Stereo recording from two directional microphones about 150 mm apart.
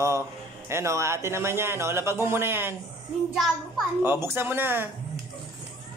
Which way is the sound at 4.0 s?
15° right (ahead or behind).